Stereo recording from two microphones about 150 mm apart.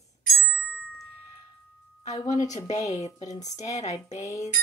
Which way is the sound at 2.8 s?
50° left (ahead or behind).